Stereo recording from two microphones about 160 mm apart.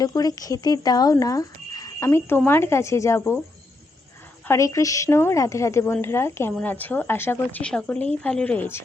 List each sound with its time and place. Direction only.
0.0 s a woman's voice: 25° left (ahead or behind)
4.4 s a woman's voice: 20° left (ahead or behind)